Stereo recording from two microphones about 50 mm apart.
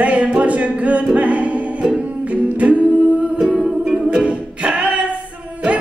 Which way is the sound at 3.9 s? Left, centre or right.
Centre.